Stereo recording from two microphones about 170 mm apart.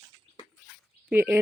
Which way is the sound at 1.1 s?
15° right (ahead or behind).